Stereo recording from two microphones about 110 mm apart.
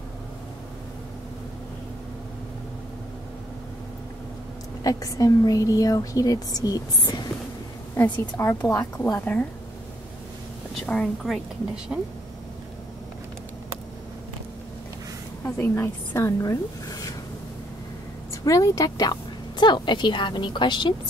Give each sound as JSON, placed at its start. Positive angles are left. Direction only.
{"t": 4.8, "sound": "a woman's voice", "side_deg": 30}
{"t": 7.9, "sound": "a woman's voice", "side_deg": 25}
{"t": 9.2, "sound": "a woman's voice", "side_deg": 15}
{"t": 10.9, "sound": "a woman's voice", "side_deg": 5}
{"t": 15.4, "sound": "a woman's voice", "side_deg": 20}
{"t": 18.3, "sound": "a woman's voice", "side_deg": 30}